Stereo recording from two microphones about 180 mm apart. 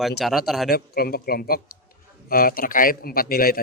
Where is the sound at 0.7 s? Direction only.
60° left (ahead or behind).